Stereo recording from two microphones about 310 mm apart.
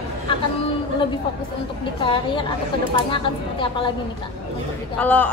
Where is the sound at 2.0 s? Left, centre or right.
Centre.